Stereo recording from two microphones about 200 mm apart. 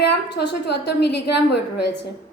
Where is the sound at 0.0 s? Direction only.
55° left (ahead or behind).